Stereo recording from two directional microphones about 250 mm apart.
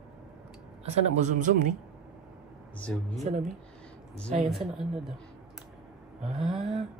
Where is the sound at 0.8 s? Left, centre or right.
Right.